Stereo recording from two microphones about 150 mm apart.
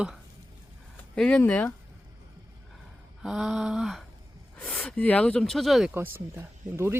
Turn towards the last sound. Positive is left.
turn(degrees=-15)  # may be behind; listen again after turning